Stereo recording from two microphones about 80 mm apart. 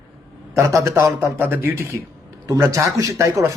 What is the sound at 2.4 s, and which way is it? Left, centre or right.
Speech, right.